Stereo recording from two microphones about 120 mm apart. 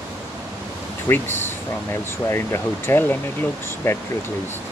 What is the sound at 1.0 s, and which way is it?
Speech, 20° left (ahead or behind).